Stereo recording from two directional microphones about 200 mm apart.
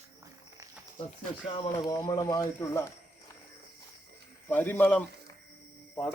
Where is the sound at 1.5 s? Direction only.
20° left (ahead or behind).